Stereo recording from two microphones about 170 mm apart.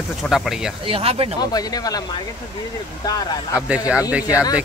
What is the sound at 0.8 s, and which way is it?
Speech, 35° right (ahead or behind).